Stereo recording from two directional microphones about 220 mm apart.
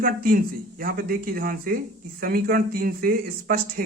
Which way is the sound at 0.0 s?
40° right (ahead or behind).